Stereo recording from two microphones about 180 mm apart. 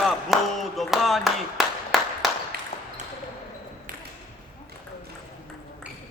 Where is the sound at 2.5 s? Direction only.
55° right (ahead or behind).